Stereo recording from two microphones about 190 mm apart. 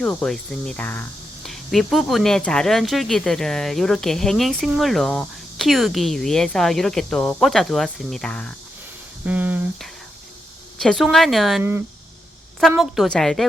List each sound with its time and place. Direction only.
0.0 s speech: 5° left (ahead or behind)
9.2 s speech: 10° right (ahead or behind)